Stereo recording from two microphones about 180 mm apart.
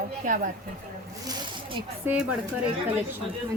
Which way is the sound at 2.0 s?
10° right (ahead or behind).